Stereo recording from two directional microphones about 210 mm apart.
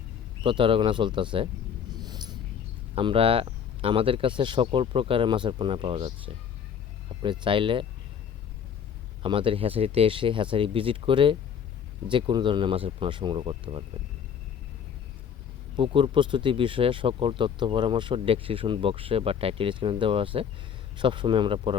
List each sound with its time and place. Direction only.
0.4 s speech: 25° right (ahead or behind)
1.9 s a sound: 20° right (ahead or behind)
2.9 s speech: 25° right (ahead or behind)
9.2 s speech: 25° right (ahead or behind)
15.7 s speech: 25° right (ahead or behind)